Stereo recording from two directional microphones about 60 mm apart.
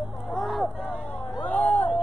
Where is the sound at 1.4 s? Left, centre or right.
Left.